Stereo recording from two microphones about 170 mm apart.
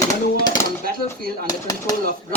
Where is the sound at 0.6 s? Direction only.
15° left (ahead or behind).